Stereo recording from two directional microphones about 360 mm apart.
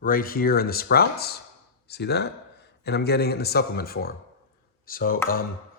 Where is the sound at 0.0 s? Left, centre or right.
Left.